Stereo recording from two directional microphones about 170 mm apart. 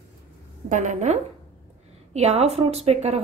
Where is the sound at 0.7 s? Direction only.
45° right (ahead or behind).